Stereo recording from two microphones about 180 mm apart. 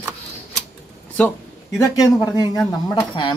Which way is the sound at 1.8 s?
20° left (ahead or behind).